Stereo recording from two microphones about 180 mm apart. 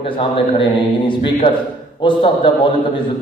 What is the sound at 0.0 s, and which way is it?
A man's voice, 30° left (ahead or behind).